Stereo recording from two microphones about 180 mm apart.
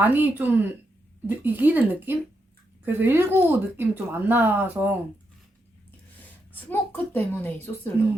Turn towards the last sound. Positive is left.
turn(degrees=10)  # may be behind; listen again after turning